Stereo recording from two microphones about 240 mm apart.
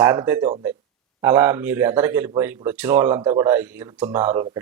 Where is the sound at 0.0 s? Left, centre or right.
Centre.